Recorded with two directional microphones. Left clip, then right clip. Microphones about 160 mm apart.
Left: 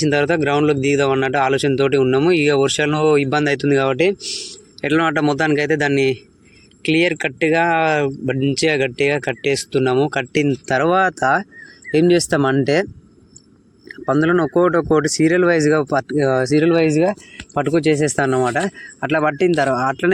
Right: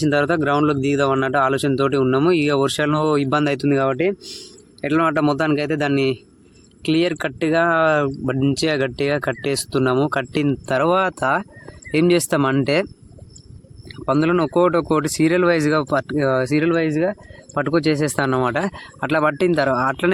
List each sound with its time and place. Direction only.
0.0 s speech: 5° right (ahead or behind)
14.0 s speech: centre (ahead or behind)
16.6 s speech: 25° left (ahead or behind)
17.5 s speech: 5° left (ahead or behind)